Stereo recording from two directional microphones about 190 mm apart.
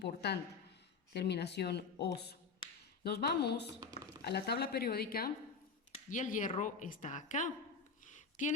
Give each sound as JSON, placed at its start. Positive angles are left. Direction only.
{"t": 0.0, "sound": "speech", "side_deg": 60}
{"t": 6.1, "sound": "speech", "side_deg": 40}
{"t": 8.0, "sound": "a sound", "side_deg": 40}